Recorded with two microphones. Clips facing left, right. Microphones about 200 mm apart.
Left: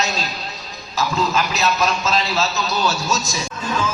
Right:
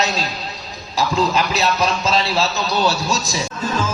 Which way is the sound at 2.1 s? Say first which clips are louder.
Right 2 dB; 35° right (ahead or behind).